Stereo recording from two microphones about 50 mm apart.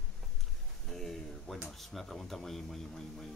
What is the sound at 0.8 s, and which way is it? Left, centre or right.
Speech, centre.